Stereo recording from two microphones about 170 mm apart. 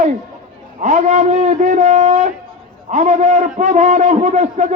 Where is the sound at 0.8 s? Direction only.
45° right (ahead or behind).